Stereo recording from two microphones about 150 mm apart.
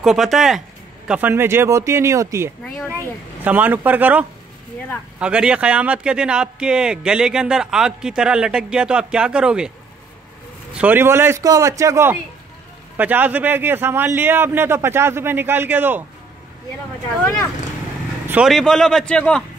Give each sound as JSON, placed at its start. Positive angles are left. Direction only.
{"t": 0.0, "sound": "a man's voice", "side_deg": 0}
{"t": 10.7, "sound": "a man's voice", "side_deg": -10}
{"t": 18.2, "sound": "vehicle", "side_deg": -10}
{"t": 18.5, "sound": "a man's voice", "side_deg": 5}